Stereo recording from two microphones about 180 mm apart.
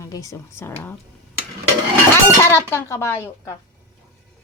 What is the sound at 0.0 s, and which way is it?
Speech, 20° left (ahead or behind).